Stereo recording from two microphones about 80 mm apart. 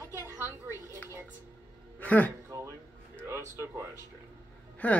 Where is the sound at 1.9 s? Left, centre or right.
Centre.